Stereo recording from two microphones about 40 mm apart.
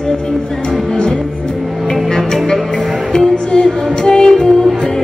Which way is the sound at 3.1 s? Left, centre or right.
Left.